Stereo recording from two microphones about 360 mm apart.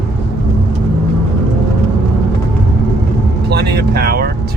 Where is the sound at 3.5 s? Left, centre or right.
Right.